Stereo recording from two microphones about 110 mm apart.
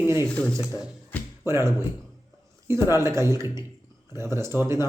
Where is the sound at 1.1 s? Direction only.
15° left (ahead or behind).